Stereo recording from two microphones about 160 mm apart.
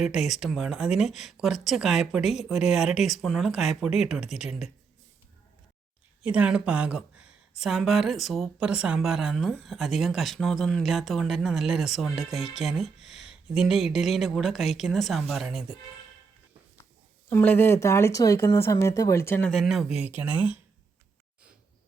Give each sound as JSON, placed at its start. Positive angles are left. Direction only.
{"t": 0.0, "sound": "speech", "side_deg": 0}
{"t": 6.2, "sound": "speech", "side_deg": -10}
{"t": 17.2, "sound": "speech", "side_deg": 10}
{"t": 19.5, "sound": "speech", "side_deg": 0}